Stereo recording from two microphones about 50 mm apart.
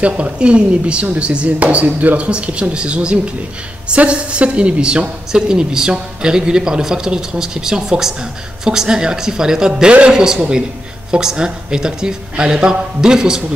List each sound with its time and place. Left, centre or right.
0.0 s a woman's voice: right